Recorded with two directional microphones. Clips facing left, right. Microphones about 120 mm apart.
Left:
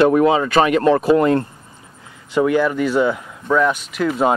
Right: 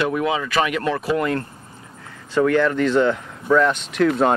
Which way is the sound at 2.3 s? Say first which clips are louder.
Left 1 dB; 10° left (ahead or behind).